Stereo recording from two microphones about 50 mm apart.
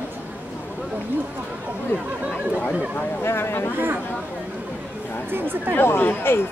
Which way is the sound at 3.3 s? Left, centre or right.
Left.